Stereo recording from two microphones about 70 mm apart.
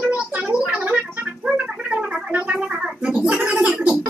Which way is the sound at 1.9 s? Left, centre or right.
Centre.